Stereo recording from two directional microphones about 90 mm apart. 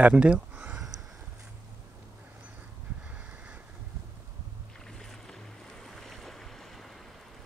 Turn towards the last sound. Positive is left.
turn(degrees=5)  # may be behind; listen again after turning